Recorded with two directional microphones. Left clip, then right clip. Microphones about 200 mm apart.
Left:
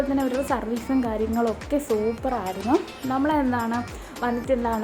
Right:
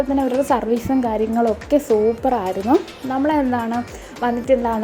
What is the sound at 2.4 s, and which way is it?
Speech, centre (ahead or behind).